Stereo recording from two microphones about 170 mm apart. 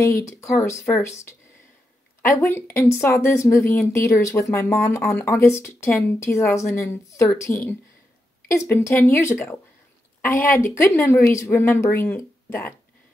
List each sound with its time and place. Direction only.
0.0 s speech: 20° left (ahead or behind)
2.2 s speech: 15° left (ahead or behind)